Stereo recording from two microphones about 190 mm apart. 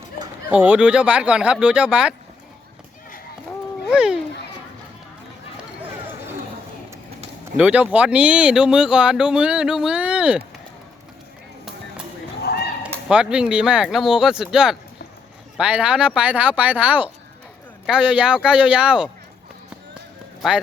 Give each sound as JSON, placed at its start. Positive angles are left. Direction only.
{"t": 0.5, "sound": "speech", "side_deg": -5}
{"t": 3.8, "sound": "speech", "side_deg": -5}
{"t": 7.5, "sound": "speech", "side_deg": -5}
{"t": 12.4, "sound": "a sound", "side_deg": 55}
{"t": 12.8, "sound": "speech", "side_deg": -5}